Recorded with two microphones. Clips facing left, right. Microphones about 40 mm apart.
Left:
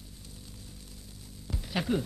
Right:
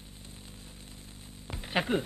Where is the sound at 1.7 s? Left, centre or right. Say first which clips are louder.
Right 1 dB; right.